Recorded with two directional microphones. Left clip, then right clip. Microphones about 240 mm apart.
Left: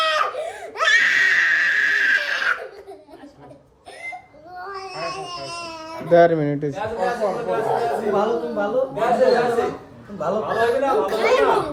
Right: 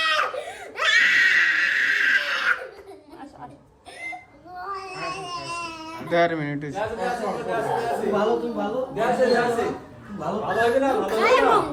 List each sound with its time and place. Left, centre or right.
0.4 s screaming: centre
4.7 s baby cry: centre
6.1 s speech: left
6.9 s speech: centre